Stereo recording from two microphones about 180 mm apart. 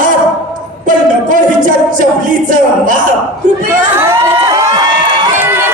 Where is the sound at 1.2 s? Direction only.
45° right (ahead or behind).